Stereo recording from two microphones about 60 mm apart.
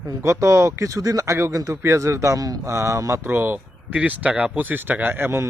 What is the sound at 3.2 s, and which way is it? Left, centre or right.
Speech, right.